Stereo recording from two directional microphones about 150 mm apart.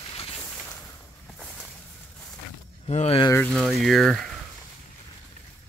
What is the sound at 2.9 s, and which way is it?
Speech, 40° left (ahead or behind).